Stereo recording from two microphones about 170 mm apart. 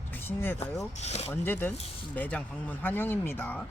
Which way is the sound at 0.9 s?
40° left (ahead or behind).